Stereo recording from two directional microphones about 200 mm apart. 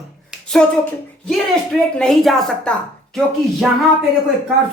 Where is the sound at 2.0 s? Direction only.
Centre (ahead or behind).